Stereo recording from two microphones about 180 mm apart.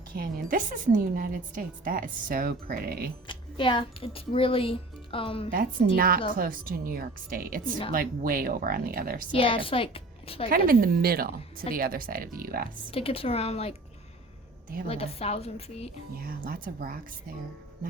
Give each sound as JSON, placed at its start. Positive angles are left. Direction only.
{"t": 0.1, "sound": "a woman's voice", "side_deg": -50}
{"t": 3.2, "sound": "speech", "side_deg": 25}
{"t": 6.0, "sound": "a woman's voice", "side_deg": -55}
{"t": 9.3, "sound": "a woman's voice", "side_deg": 30}
{"t": 10.5, "sound": "a woman's voice", "side_deg": -55}
{"t": 12.9, "sound": "speech", "side_deg": 30}
{"t": 14.8, "sound": "speech", "side_deg": 35}
{"t": 16.2, "sound": "a woman's voice", "side_deg": -50}